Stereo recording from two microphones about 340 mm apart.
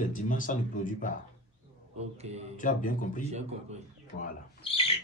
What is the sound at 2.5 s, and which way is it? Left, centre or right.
Speech, left.